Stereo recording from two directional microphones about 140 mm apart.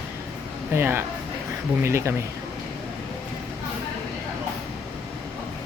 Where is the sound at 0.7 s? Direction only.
15° right (ahead or behind).